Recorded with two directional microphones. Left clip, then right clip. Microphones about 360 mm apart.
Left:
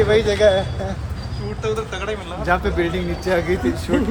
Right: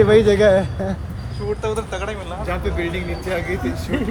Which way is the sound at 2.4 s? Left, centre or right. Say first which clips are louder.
Left 6 dB; centre.